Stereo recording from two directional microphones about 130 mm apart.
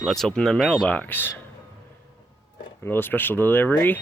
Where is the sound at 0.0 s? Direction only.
Centre (ahead or behind).